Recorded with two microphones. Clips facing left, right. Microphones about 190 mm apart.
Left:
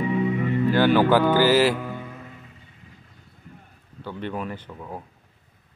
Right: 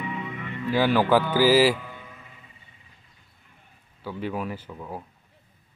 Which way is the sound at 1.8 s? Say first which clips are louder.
Left 9 dB; 50° left (ahead or behind).